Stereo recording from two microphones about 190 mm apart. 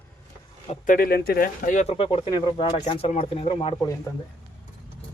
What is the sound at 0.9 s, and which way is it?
Speech, 50° left (ahead or behind).